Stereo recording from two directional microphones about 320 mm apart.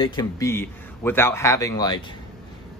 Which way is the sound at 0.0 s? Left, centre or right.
Centre.